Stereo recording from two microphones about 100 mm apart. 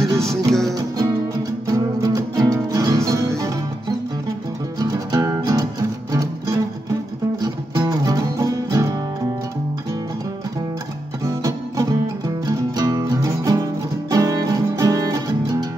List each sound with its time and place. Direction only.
0.5 s music: 5° left (ahead or behind)
0.7 s music: 40° right (ahead or behind)
4.7 s music: 35° right (ahead or behind)
11.2 s music: 35° right (ahead or behind)